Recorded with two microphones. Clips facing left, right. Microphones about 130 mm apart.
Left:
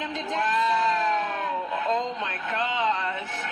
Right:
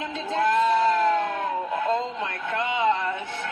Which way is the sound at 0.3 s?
20° right (ahead or behind).